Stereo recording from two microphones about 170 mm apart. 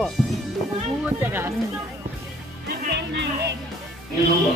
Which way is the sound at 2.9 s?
85° right.